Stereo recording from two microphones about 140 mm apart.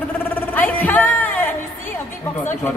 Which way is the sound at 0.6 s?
10° left (ahead or behind).